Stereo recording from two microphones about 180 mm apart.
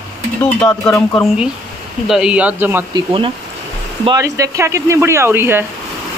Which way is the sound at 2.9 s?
30° right (ahead or behind).